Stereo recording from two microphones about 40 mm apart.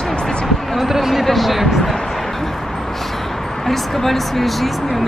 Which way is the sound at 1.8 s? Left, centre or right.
Centre.